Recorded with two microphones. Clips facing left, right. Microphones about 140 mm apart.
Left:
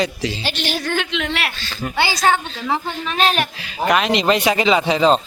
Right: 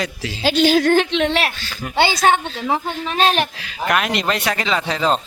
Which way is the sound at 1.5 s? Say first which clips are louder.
Left 3 dB; 10° right (ahead or behind).